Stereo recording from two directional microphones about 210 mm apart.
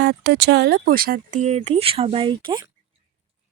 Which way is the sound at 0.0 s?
55° right (ahead or behind).